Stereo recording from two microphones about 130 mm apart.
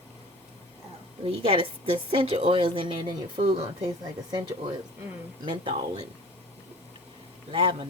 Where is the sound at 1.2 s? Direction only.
45° right (ahead or behind).